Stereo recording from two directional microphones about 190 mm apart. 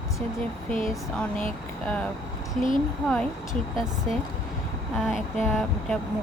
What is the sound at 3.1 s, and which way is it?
Speech, centre (ahead or behind).